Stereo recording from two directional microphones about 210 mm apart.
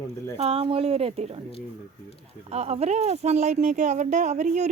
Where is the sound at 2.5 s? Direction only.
30° right (ahead or behind).